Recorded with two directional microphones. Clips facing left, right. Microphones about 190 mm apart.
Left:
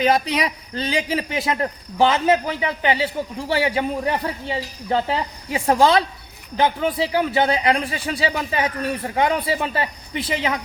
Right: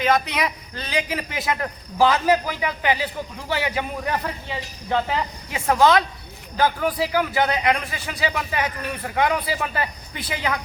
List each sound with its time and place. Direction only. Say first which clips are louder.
0.0 s a man's voice: left 2 dB; 35° left (ahead or behind)